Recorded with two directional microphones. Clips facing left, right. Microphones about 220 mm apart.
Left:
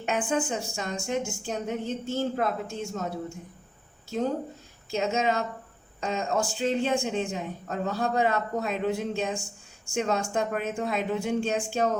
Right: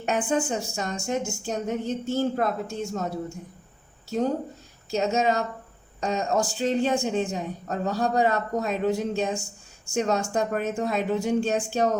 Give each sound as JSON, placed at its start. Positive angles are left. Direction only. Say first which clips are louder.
{"t": 0.0, "sound": "a woman's voice", "louder": "right 2 dB", "side_deg": -40}
{"t": 4.9, "sound": "a woman's voice", "louder": "right 3 dB", "side_deg": -40}